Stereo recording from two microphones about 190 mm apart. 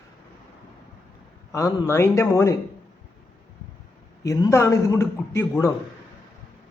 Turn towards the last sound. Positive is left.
turn(degrees=15)  # may be behind; listen again after turning